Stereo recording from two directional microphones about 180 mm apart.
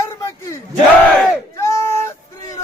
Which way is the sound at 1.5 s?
15° left (ahead or behind).